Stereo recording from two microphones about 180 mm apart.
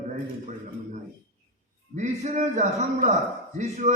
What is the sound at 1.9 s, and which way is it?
A man's voice, 40° right (ahead or behind).